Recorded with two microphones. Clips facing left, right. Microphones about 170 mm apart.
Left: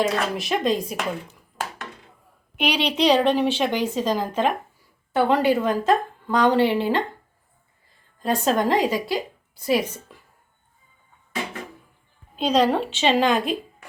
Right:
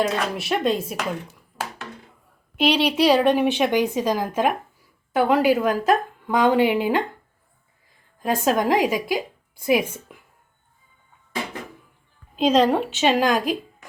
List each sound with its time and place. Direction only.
0.0 s a woman's voice: centre (ahead or behind)
8.2 s a woman's voice: 5° right (ahead or behind)
12.4 s speech: 5° right (ahead or behind)